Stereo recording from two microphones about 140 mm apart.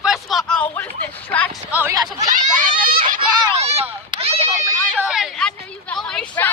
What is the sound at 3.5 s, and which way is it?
Speech, 50° right (ahead or behind).